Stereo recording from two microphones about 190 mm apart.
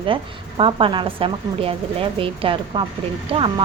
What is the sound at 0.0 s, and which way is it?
A woman's voice, 25° right (ahead or behind).